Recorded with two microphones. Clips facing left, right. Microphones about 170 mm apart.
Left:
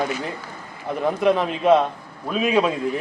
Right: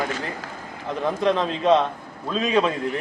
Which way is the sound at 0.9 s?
10° left (ahead or behind).